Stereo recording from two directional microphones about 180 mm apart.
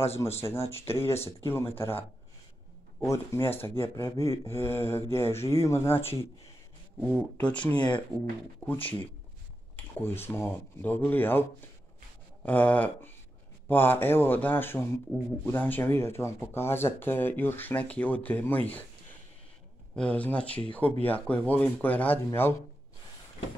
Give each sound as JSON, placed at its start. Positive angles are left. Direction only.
{"t": 0.4, "sound": "speech", "side_deg": 15}
{"t": 7.7, "sound": "speech", "side_deg": 25}
{"t": 8.6, "sound": "speech", "side_deg": 10}
{"t": 10.0, "sound": "speech", "side_deg": 10}
{"t": 12.4, "sound": "speech", "side_deg": 10}
{"t": 20.0, "sound": "speech", "side_deg": 10}